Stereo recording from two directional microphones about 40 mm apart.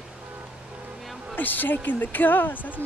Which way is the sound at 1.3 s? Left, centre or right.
Left.